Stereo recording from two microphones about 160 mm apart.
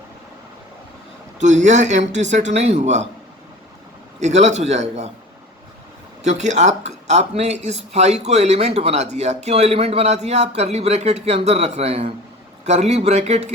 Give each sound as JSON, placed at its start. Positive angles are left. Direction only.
{"t": 1.4, "sound": "speech", "side_deg": -50}
{"t": 4.2, "sound": "speech", "side_deg": -45}
{"t": 6.2, "sound": "speech", "side_deg": -45}